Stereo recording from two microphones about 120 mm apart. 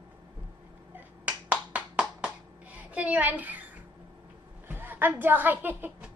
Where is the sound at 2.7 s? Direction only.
10° right (ahead or behind).